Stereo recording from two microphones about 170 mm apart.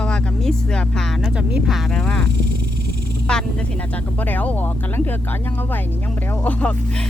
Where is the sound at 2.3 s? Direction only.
75° right (ahead or behind).